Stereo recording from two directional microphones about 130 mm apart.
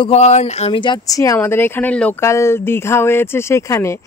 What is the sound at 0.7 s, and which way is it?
Speech, 35° left (ahead or behind).